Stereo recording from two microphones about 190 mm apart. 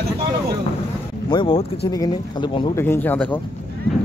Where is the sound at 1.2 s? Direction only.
25° left (ahead or behind).